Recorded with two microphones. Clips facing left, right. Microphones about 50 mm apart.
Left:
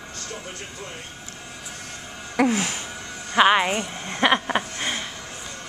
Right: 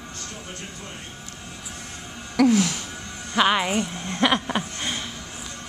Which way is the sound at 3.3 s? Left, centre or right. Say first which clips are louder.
Left 3 dB; centre.